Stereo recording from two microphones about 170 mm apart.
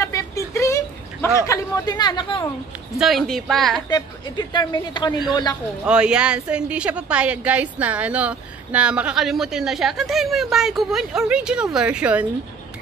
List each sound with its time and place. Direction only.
0.0 s a sound: 15° left (ahead or behind)
1.4 s speech: 20° left (ahead or behind)
3.0 s a woman's voice: centre (ahead or behind)
3.9 s speech: 25° left (ahead or behind)
5.9 s a woman's voice: 5° right (ahead or behind)